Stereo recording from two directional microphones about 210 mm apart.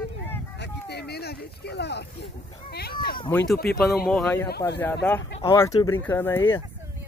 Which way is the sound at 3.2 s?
10° left (ahead or behind).